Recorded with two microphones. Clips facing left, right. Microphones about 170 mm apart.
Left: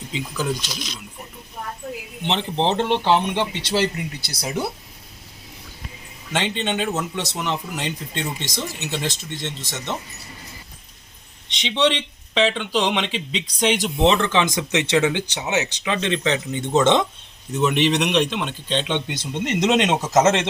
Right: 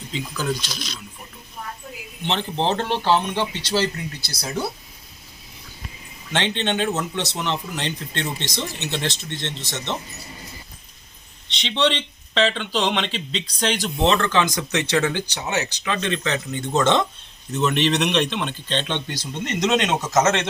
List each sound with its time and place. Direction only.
0.1 s speech: 15° left (ahead or behind)
1.8 s a sound: 45° left (ahead or behind)
2.2 s speech: 20° left (ahead or behind)
6.3 s speech: 5° left (ahead or behind)
11.6 s speech: 10° left (ahead or behind)
19.1 s speech: 25° left (ahead or behind)